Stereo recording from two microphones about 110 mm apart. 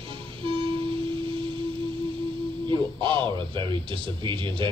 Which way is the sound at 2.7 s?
50° right (ahead or behind).